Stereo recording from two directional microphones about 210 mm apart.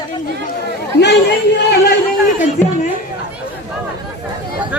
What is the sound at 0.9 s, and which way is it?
Speech, 55° left (ahead or behind).